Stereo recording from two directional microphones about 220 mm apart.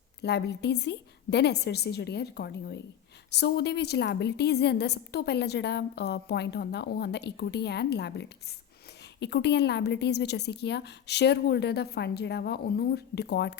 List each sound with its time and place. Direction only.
0.2 s a woman's voice: 50° left (ahead or behind)